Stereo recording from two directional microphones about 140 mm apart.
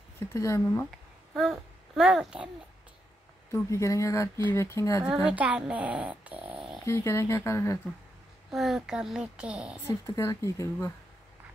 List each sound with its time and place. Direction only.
0.3 s speech: 20° left (ahead or behind)
1.3 s a child's voice: centre (ahead or behind)
3.5 s speech: 20° left (ahead or behind)
5.1 s speech: 10° right (ahead or behind)
6.9 s speech: 20° left (ahead or behind)
8.5 s a woman's voice: centre (ahead or behind)
9.8 s speech: 20° left (ahead or behind)